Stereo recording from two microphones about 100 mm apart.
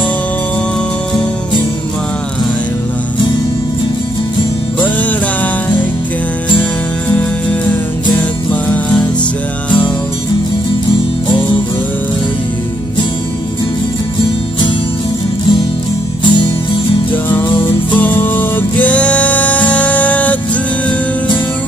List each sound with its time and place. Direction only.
9.7 s music: 50° left (ahead or behind)
16.3 s music: 55° left (ahead or behind)
17.1 s music: 20° left (ahead or behind)